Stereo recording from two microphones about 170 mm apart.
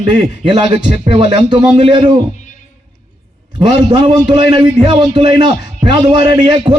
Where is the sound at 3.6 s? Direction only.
30° right (ahead or behind).